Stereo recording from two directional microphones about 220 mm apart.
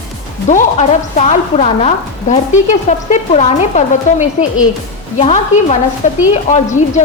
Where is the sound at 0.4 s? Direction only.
35° left (ahead or behind).